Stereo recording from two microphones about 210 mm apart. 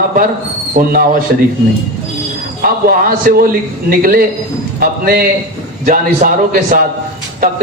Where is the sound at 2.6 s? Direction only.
45° right (ahead or behind).